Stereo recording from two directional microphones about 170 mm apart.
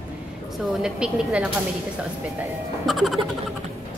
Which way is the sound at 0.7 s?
5° right (ahead or behind).